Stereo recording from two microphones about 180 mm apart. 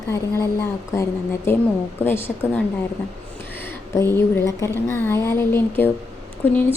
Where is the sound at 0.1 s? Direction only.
15° left (ahead or behind).